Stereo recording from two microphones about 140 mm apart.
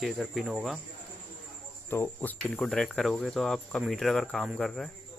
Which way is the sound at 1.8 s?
15° left (ahead or behind).